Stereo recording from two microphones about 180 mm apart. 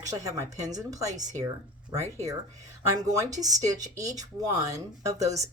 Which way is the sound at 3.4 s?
20° right (ahead or behind).